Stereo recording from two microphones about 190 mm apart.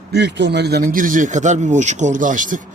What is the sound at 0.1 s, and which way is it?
Speech, 65° right (ahead or behind).